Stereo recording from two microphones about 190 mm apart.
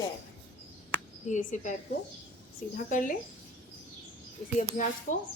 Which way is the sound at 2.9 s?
45° left (ahead or behind).